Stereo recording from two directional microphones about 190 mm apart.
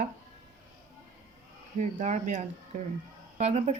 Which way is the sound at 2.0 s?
40° right (ahead or behind).